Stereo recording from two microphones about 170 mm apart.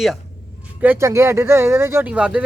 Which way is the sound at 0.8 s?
15° right (ahead or behind).